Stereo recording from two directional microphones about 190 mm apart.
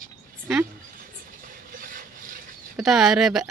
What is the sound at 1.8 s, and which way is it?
Wood, 45° right (ahead or behind).